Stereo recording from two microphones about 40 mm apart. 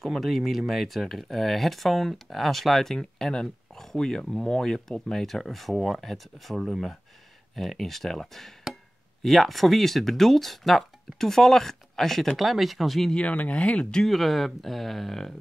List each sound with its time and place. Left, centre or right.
0.0 s speech: centre
13.1 s speech: left
14.0 s speech: centre